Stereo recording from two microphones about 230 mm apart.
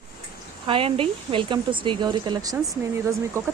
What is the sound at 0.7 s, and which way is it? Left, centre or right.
Speech, right.